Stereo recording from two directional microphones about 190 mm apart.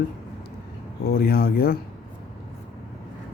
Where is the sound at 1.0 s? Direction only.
55° left (ahead or behind).